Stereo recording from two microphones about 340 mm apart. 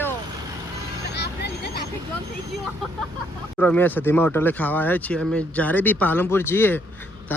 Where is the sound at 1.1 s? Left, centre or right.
Left.